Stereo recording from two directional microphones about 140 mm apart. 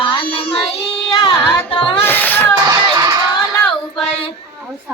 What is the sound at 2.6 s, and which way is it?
Crowd, 30° right (ahead or behind).